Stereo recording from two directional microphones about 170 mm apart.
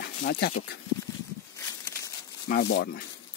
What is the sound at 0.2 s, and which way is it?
Speech, 65° left (ahead or behind).